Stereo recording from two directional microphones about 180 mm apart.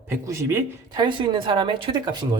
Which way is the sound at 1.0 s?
25° right (ahead or behind).